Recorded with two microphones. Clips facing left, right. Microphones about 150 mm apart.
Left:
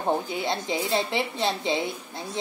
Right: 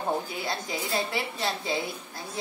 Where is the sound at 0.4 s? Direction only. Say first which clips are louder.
Left 5 dB; 25° left (ahead or behind).